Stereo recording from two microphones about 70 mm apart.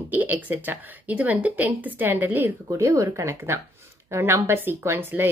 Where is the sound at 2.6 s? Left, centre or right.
Right.